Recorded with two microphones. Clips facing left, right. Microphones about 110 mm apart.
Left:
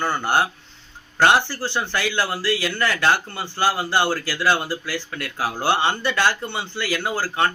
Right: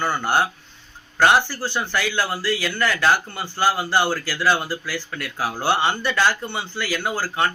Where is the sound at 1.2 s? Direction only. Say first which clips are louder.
Even; 25° left (ahead or behind).